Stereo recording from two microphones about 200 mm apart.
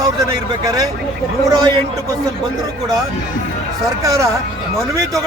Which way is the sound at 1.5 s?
20° right (ahead or behind).